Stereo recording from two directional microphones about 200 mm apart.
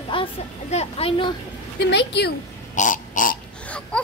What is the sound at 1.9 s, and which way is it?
Speech, 60° left (ahead or behind).